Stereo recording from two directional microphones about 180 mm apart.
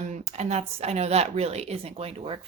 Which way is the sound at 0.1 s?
35° right (ahead or behind).